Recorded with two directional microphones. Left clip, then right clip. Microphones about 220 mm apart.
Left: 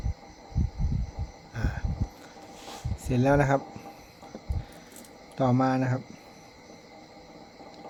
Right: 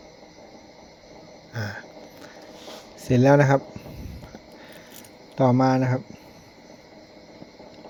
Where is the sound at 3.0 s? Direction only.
20° right (ahead or behind).